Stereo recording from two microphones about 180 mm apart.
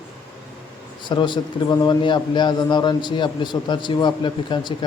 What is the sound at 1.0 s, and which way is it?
A man's voice, 25° left (ahead or behind).